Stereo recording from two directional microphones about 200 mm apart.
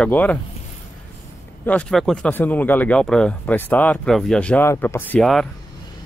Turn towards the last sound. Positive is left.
turn(degrees=0)  # may be behind; listen again after turning